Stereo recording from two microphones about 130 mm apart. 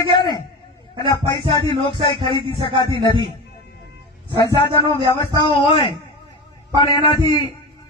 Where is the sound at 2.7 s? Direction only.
40° right (ahead or behind).